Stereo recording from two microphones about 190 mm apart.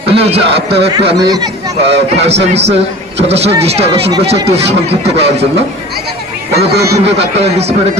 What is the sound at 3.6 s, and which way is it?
A man's voice, 30° right (ahead or behind).